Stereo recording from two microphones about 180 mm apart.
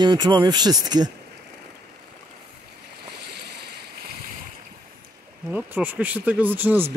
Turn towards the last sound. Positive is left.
turn(degrees=-10)  # may be behind; listen again after turning